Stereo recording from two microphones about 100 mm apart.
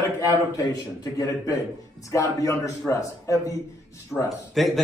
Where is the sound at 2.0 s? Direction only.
30° left (ahead or behind).